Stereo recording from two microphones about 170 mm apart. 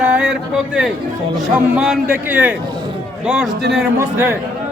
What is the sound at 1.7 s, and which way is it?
A man's voice, 5° right (ahead or behind).